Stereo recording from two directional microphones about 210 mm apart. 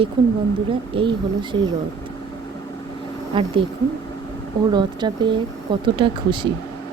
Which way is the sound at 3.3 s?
25° right (ahead or behind).